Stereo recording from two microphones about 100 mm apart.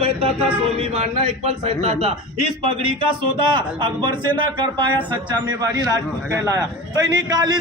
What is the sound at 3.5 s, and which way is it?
Speech, 50° right (ahead or behind).